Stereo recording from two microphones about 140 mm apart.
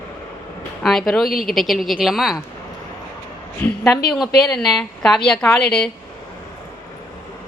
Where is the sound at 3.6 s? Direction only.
10° left (ahead or behind).